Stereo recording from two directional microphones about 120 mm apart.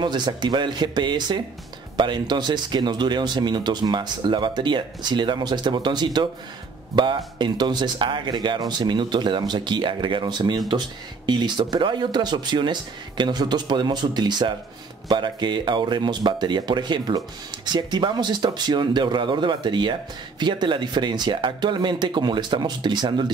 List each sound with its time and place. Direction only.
0.0 s speech: 40° right (ahead or behind)